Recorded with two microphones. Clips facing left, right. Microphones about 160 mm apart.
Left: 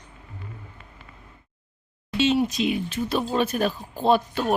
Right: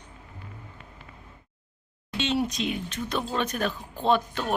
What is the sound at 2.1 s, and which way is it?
Speech, 5° left (ahead or behind).